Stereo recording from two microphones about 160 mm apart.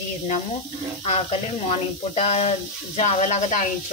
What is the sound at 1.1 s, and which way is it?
Speech, 45° left (ahead or behind).